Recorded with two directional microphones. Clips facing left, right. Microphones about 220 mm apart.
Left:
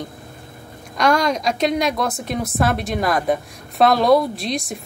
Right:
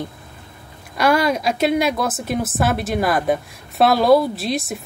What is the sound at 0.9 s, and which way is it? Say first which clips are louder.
A woman's voice: right 1 dB; 5° right (ahead or behind).